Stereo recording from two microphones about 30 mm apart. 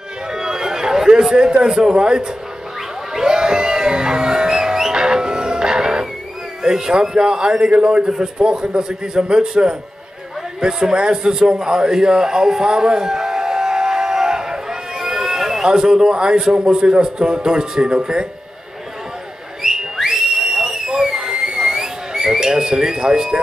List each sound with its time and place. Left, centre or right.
0.3 s a sound: right
2.0 s a man's voice: right
3.3 s music: right
6.6 s a man's voice: centre
10.8 s a man's voice: right
11.6 s music: right; by 15.6 s centre
15.6 s a man's voice: centre
19.6 s whistle: centre
21.8 s whistling: centre
22.9 s a man's voice: right